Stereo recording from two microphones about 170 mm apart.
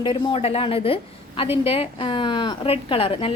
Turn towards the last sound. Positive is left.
turn(degrees=35)  # may be behind; listen again after turning